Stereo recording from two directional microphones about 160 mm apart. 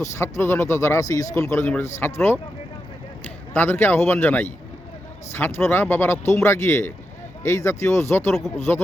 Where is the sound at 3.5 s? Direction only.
15° left (ahead or behind).